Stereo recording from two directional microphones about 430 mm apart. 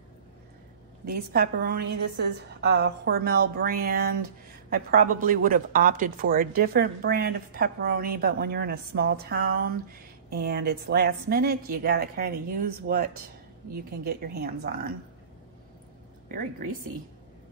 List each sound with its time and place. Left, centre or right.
1.0 s speech: right
16.3 s a woman's voice: centre